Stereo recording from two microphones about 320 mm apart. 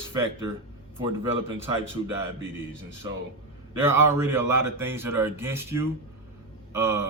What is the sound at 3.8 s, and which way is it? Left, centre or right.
Speech, centre.